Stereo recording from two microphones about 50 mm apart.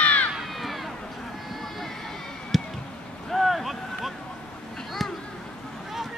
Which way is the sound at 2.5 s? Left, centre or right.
Centre.